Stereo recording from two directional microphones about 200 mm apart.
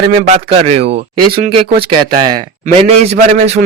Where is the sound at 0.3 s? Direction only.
30° right (ahead or behind).